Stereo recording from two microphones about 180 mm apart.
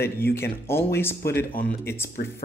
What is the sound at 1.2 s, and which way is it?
Speech, 60° left (ahead or behind).